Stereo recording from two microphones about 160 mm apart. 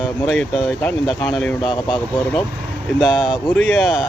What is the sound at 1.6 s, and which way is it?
Speech, 30° left (ahead or behind).